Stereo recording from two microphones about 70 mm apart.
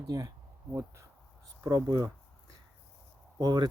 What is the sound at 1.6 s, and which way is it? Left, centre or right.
Speech, right.